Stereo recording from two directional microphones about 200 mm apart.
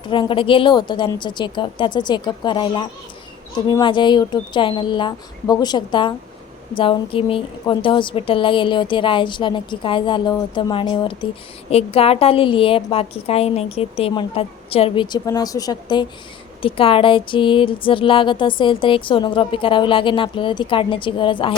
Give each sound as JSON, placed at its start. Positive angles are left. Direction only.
{"t": 0.0, "sound": "a woman's voice", "side_deg": 25}